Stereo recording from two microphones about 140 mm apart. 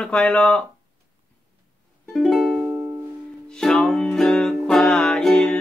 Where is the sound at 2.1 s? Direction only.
Centre (ahead or behind).